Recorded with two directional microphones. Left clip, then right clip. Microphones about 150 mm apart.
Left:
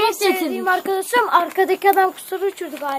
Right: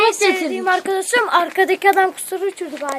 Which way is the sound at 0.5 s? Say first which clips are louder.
Right 1 dB; 15° right (ahead or behind).